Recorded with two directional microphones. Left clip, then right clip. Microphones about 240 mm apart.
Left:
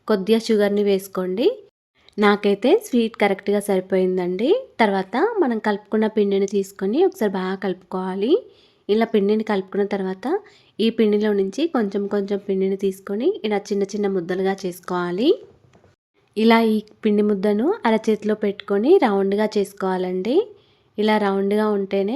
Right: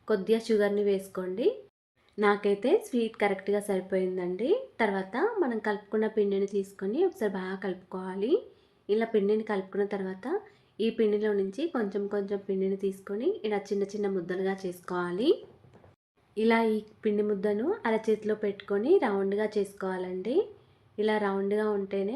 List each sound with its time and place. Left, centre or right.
0.0 s speech: left
16.3 s speech: left